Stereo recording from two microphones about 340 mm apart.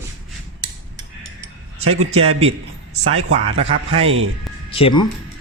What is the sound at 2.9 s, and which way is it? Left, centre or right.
Speech, right.